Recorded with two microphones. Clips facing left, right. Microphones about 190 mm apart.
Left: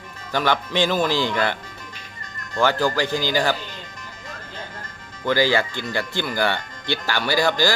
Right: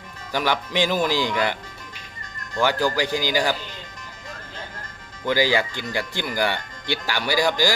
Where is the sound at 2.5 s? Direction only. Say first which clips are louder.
Left 1 dB; 10° right (ahead or behind).